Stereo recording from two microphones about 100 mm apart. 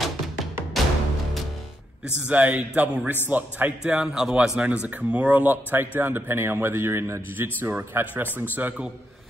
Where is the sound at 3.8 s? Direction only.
5° right (ahead or behind).